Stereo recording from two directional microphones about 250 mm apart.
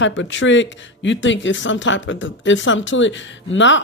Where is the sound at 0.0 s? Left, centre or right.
Left.